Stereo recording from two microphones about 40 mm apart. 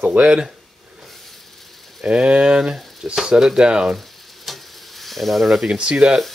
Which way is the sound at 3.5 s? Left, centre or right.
Right.